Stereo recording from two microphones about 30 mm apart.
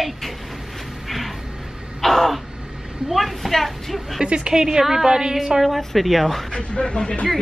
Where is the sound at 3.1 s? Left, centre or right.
Centre.